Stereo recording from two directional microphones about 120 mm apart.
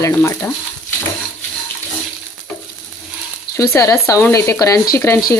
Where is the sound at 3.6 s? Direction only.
25° left (ahead or behind).